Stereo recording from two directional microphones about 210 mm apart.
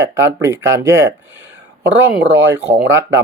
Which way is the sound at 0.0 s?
15° right (ahead or behind).